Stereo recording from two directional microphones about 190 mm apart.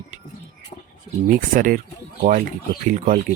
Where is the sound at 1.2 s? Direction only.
45° right (ahead or behind).